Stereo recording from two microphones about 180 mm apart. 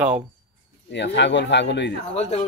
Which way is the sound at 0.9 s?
75° left (ahead or behind).